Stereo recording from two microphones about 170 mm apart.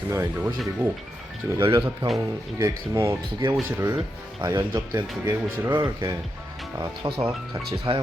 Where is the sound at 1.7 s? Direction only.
30° right (ahead or behind).